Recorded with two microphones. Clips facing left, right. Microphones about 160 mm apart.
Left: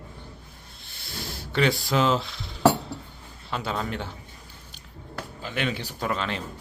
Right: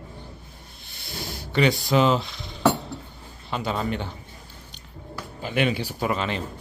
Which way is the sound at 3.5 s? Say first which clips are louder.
Right 3 dB; centre (ahead or behind).